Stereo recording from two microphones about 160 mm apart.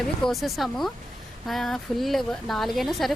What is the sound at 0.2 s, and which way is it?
Speech, centre (ahead or behind).